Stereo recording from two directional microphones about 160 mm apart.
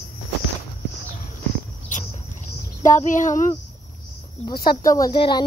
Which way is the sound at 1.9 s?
50° left (ahead or behind).